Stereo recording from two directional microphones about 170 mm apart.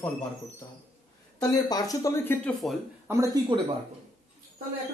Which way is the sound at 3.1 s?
20° right (ahead or behind).